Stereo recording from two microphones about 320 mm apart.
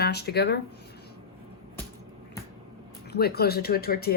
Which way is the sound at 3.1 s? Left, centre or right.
Left.